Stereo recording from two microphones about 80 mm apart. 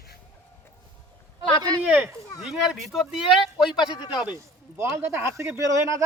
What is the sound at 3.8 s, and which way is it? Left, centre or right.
Speech, left.